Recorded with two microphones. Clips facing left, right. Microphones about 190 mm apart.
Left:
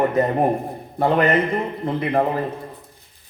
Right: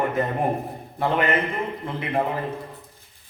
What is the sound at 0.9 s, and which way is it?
Speech, 40° left (ahead or behind).